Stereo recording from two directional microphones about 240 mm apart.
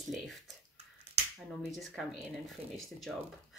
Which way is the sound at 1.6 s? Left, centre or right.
Centre.